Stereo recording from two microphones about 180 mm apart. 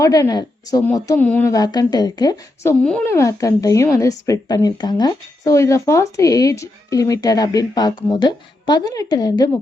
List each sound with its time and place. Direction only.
0.0 s a woman's voice: 20° left (ahead or behind)
2.8 s a woman's voice: 10° left (ahead or behind)